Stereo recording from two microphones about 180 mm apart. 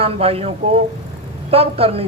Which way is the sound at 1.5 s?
35° right (ahead or behind).